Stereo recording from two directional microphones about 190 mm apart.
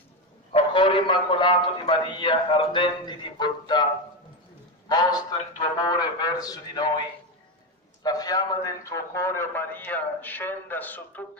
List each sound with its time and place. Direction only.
0.5 s a man's voice: 25° left (ahead or behind)
4.8 s a man's voice: 20° left (ahead or behind)
8.0 s a man's voice: 20° left (ahead or behind)